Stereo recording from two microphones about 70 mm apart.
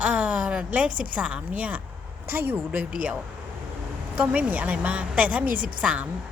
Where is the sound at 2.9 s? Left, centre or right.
Centre.